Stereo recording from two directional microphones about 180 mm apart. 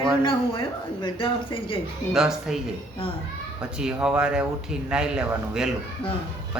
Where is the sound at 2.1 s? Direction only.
Centre (ahead or behind).